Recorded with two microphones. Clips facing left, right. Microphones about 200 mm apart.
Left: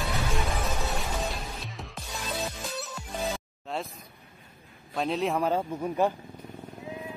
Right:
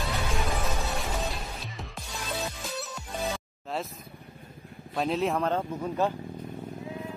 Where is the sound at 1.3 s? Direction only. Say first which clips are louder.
Even; centre (ahead or behind).